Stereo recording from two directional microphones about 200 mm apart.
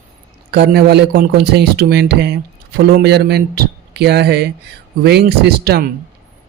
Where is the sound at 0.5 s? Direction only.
55° right (ahead or behind).